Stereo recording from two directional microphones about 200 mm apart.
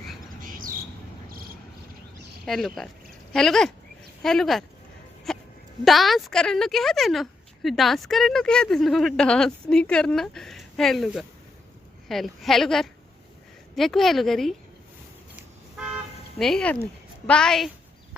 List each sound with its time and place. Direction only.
0.3 s bird: 45° right (ahead or behind)
2.5 s a woman's voice: centre (ahead or behind)
16.4 s a woman's voice: 5° left (ahead or behind)